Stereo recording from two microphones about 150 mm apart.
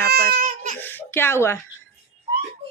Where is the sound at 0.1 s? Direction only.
75° right (ahead or behind).